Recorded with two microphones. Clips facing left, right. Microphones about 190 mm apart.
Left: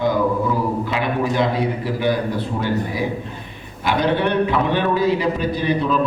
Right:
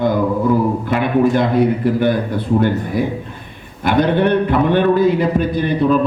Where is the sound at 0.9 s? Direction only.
55° right (ahead or behind).